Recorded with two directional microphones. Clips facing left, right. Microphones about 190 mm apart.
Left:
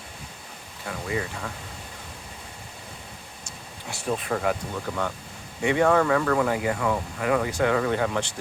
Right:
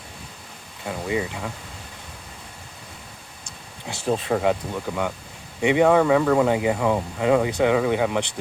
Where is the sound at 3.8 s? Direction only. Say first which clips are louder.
Right 4 dB; 25° right (ahead or behind).